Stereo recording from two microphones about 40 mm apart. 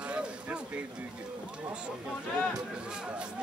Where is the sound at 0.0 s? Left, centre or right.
Right.